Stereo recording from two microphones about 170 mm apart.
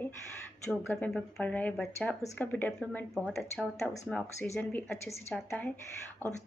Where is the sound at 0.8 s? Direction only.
5° left (ahead or behind).